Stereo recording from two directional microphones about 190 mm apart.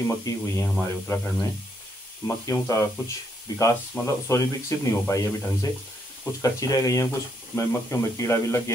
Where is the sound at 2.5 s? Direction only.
15° left (ahead or behind).